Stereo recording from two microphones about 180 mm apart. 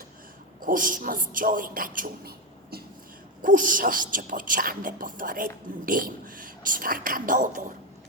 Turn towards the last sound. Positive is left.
turn(degrees=-45)  # may be behind; listen again after turning